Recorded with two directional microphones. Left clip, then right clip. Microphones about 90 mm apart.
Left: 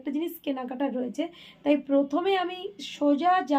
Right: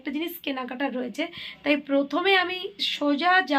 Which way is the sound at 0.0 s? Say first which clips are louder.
Right 1 dB; 25° left (ahead or behind).